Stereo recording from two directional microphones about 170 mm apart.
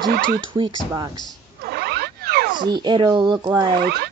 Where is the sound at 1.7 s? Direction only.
70° right (ahead or behind).